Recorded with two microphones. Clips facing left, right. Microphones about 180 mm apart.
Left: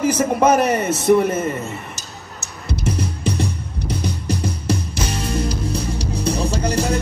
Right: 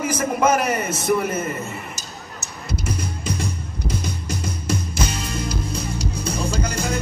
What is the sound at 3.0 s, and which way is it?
Music, 65° left (ahead or behind).